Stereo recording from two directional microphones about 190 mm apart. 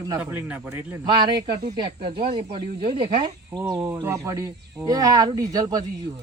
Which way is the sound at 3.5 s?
20° right (ahead or behind).